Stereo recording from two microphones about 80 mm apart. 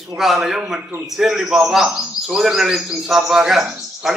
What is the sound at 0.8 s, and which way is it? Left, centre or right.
Speech, right.